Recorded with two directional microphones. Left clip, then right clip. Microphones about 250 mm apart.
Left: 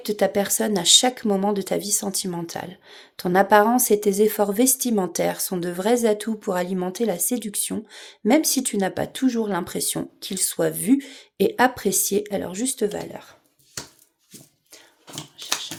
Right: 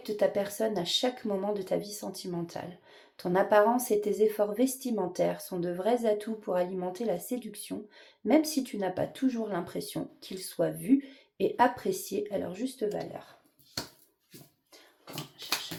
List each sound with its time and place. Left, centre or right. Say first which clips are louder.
0.0 s speech: left 7 dB; left